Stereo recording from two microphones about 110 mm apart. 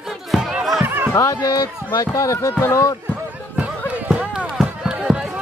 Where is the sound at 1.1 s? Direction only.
30° left (ahead or behind).